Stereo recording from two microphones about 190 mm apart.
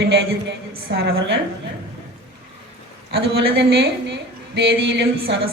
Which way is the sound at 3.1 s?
60° right (ahead or behind).